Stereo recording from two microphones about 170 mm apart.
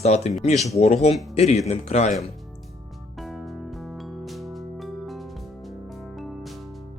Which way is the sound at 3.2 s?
Centre (ahead or behind).